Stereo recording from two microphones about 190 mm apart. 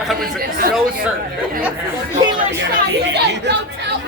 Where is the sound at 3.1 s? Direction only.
60° right (ahead or behind).